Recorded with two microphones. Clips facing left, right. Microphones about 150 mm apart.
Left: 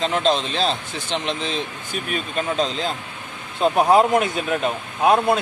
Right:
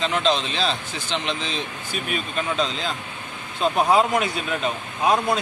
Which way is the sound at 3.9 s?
50° left (ahead or behind).